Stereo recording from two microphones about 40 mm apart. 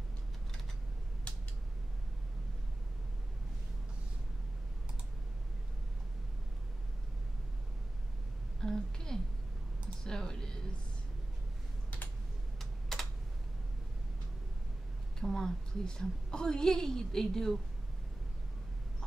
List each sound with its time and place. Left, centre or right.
8.5 s a sound: centre
10.0 s a woman's voice: centre
15.1 s a woman's voice: centre